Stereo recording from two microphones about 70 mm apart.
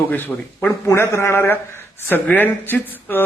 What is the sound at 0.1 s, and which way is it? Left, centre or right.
Speech, left.